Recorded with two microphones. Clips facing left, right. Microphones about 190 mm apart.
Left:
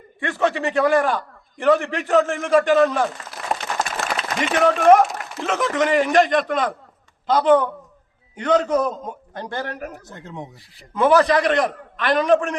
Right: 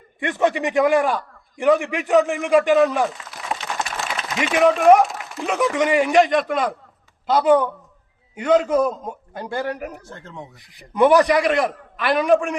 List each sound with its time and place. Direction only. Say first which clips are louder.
0.2 s a man's voice: right 1 dB; 15° right (ahead or behind)
0.9 s a man's voice: even; centre (ahead or behind)
10.1 s speech: left 2 dB; 15° left (ahead or behind)
10.8 s a man's voice: right 2 dB; 15° right (ahead or behind)